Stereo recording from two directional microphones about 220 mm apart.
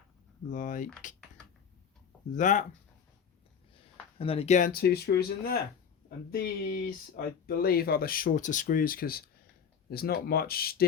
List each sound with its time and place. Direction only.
0.5 s speech: 35° left (ahead or behind)
2.3 s speech: 35° left (ahead or behind)
4.2 s speech: 25° left (ahead or behind); by 10.8 s 45° left (ahead or behind)